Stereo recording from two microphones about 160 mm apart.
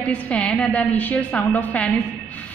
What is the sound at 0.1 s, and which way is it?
A woman's voice, 5° left (ahead or behind).